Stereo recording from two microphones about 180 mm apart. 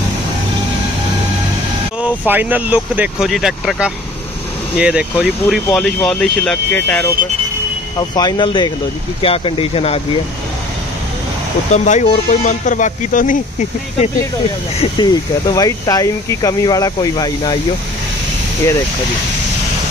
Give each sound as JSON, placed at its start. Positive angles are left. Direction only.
{"t": 2.0, "sound": "speech", "side_deg": -10}
{"t": 8.1, "sound": "speech", "side_deg": 25}
{"t": 11.7, "sound": "speech", "side_deg": 40}
{"t": 14.8, "sound": "speech", "side_deg": 25}